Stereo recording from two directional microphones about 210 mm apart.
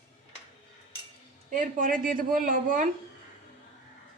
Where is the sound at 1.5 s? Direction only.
40° right (ahead or behind).